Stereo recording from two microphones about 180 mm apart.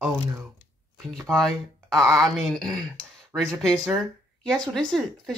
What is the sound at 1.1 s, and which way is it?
Speech, centre (ahead or behind).